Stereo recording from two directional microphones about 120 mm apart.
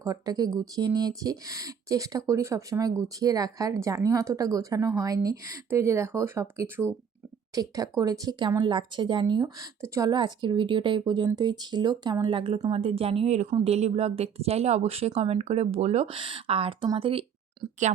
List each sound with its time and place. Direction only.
0.0 s speech: 30° right (ahead or behind)
9.8 s speech: 25° right (ahead or behind)
10.1 s a woman's voice: 40° right (ahead or behind); by 16.0 s 65° right (ahead or behind)
16.0 s a woman's voice: 45° right (ahead or behind)